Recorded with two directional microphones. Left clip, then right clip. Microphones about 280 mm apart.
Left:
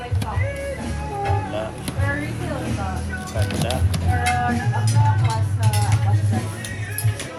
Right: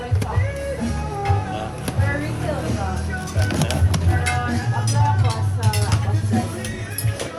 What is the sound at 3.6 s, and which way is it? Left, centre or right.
Music, right.